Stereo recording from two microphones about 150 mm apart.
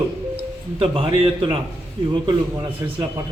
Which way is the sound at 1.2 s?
40° right (ahead or behind).